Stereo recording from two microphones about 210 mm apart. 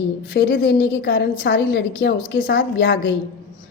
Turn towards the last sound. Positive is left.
turn(degrees=60)  # may be behind; listen again after turning